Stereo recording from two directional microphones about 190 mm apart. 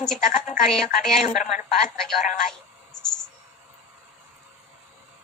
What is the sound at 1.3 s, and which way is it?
Speech, 40° left (ahead or behind).